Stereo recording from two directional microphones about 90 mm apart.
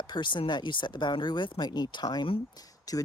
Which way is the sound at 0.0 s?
60° left (ahead or behind).